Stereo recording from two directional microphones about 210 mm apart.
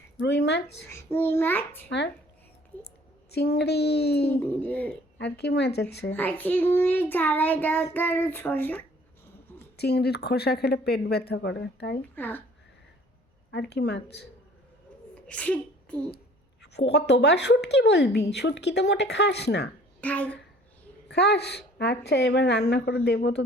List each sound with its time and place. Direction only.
0.2 s a woman's voice: 55° left (ahead or behind)
0.9 s a child's voice: 10° left (ahead or behind)
3.3 s a woman's voice: 50° left (ahead or behind)
4.3 s a child's voice: 10° left (ahead or behind)
5.1 s a woman's voice: 55° left (ahead or behind)
6.1 s a child's voice: 10° left (ahead or behind)
9.7 s a woman's voice: 50° left (ahead or behind)
12.1 s a child's voice: 10° left (ahead or behind)
13.5 s a woman's voice: 55° left (ahead or behind)
15.1 s a sound: 5° left (ahead or behind)
16.7 s a woman's voice: 55° left (ahead or behind)
20.0 s a child's voice: 5° left (ahead or behind)
21.1 s a woman's voice: 50° left (ahead or behind)